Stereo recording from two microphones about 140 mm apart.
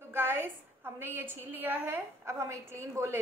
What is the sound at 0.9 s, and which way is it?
A woman's voice, 15° right (ahead or behind).